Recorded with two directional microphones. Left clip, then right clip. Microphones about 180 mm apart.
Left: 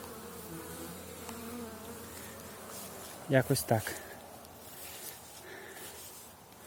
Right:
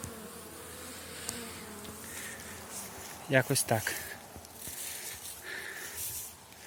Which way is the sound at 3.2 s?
20° left (ahead or behind).